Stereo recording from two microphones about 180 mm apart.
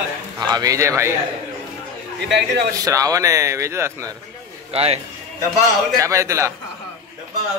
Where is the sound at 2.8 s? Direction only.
20° right (ahead or behind).